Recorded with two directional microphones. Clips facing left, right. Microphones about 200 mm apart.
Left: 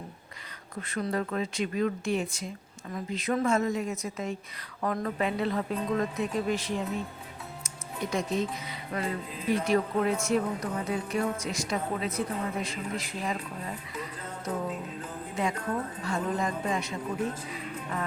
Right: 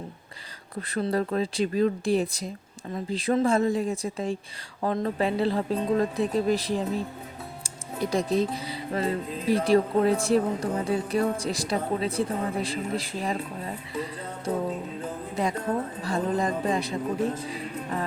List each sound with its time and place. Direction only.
0.8 s speech: 35° right (ahead or behind)
13.9 s music: 30° right (ahead or behind)
15.4 s speech: 35° right (ahead or behind)